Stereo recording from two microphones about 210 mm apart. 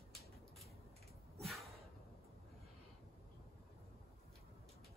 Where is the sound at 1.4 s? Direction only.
Centre (ahead or behind).